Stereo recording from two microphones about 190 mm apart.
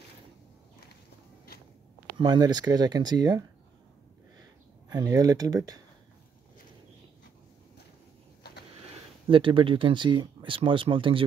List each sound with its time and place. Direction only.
2.1 s speech: 20° right (ahead or behind)
4.8 s speech: 20° right (ahead or behind)
9.3 s speech: 25° right (ahead or behind)